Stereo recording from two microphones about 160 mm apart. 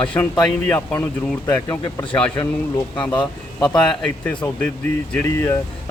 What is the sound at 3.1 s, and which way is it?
Speech, 30° left (ahead or behind).